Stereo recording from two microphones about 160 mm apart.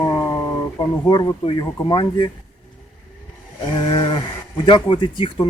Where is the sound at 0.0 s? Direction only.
15° left (ahead or behind).